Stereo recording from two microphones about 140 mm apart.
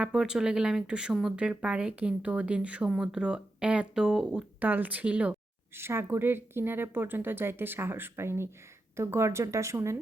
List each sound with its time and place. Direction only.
0.0 s speech: 5° right (ahead or behind)